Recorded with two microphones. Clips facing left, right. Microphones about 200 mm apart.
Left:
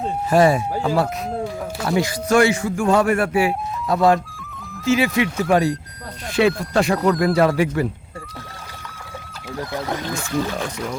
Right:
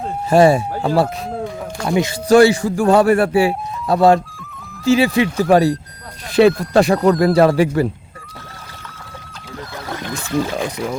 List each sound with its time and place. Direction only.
0.3 s speech: 30° right (ahead or behind)
1.3 s speech: centre (ahead or behind)
1.9 s speech: 20° right (ahead or behind)
2.3 s a man's voice: 35° right (ahead or behind)
7.3 s a man's voice: 30° right (ahead or behind)